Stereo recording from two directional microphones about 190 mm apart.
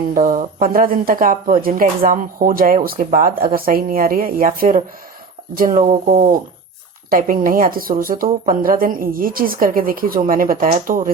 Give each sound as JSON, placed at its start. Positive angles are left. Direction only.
{"t": 0.1, "sound": "speech", "side_deg": -45}
{"t": 5.8, "sound": "speech", "side_deg": -35}
{"t": 7.1, "sound": "speech", "side_deg": -50}